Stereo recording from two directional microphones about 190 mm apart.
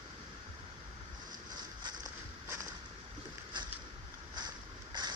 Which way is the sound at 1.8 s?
15° right (ahead or behind).